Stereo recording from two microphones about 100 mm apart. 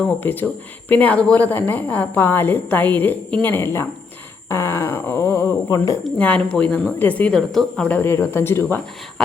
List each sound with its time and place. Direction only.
0.2 s speech: 20° left (ahead or behind); by 6.0 s 35° left (ahead or behind)
6.1 s speech: 15° left (ahead or behind)
7.9 s speech: 20° left (ahead or behind)